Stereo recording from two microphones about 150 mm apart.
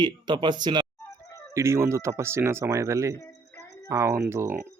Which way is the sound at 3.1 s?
20° left (ahead or behind).